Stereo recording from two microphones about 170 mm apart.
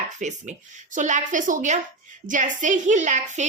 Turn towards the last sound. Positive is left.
turn(degrees=-45)  # may be behind; listen again after turning